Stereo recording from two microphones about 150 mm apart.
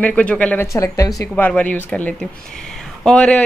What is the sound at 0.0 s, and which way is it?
Speech, 10° left (ahead or behind).